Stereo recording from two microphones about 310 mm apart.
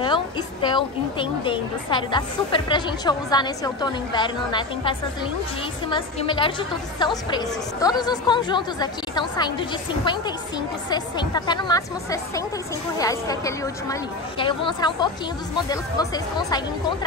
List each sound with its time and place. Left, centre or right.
0.0 s a woman's voice: centre